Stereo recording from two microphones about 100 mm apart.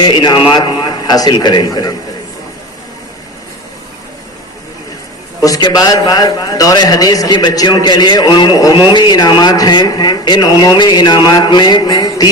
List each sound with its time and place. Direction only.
0.1 s speech: 50° left (ahead or behind)
5.4 s a man's voice: 40° left (ahead or behind)